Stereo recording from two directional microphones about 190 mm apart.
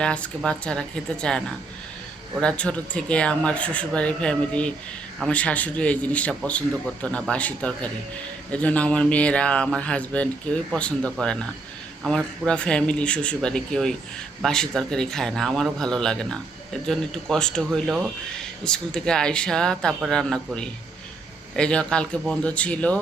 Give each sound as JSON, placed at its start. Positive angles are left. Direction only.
{"t": 0.0, "sound": "speech", "side_deg": 5}